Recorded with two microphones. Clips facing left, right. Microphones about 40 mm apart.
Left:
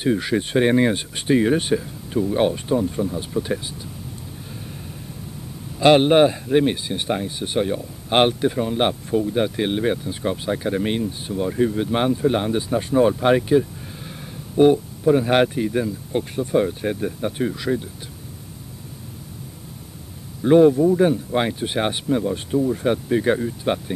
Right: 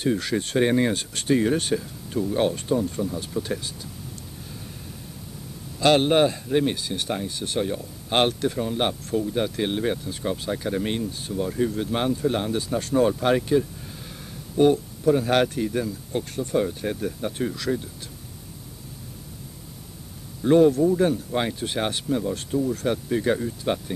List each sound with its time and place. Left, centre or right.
0.0 s speech: centre
5.8 s speech: centre
20.4 s speech: centre